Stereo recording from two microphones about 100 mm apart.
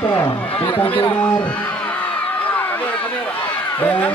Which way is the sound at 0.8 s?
15° left (ahead or behind).